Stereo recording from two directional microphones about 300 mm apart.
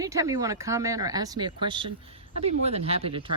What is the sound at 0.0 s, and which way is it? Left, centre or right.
Speech, centre.